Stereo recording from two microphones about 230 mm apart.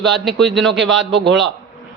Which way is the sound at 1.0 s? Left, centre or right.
Right.